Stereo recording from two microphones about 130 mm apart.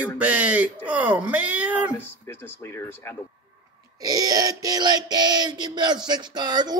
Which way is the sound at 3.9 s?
30° right (ahead or behind).